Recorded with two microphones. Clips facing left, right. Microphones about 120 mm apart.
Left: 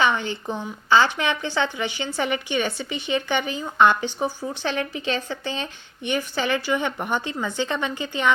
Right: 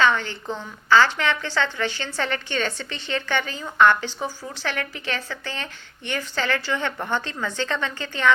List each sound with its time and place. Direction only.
0.0 s a woman's voice: 15° left (ahead or behind)